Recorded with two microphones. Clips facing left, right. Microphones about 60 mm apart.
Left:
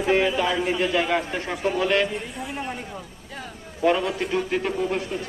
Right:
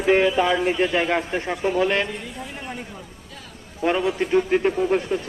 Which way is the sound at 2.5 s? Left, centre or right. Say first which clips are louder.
Left 3 dB; centre.